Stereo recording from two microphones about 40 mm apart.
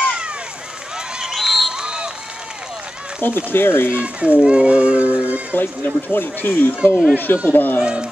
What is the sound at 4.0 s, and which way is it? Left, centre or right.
Speech, right.